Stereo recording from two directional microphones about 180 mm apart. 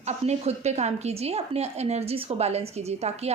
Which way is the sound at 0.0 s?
40° right (ahead or behind).